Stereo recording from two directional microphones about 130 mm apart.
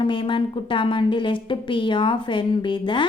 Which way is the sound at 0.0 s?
40° left (ahead or behind).